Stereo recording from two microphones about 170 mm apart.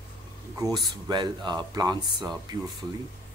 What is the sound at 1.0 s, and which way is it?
Speech, 25° right (ahead or behind).